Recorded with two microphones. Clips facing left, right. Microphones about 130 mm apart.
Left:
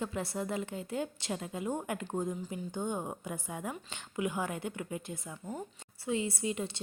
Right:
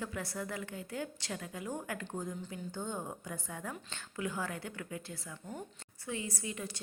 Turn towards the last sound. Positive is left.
turn(degrees=25)  # may be behind; listen again after turning